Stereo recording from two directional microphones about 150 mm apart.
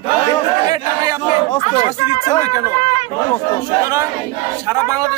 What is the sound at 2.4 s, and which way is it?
Speech, 20° right (ahead or behind).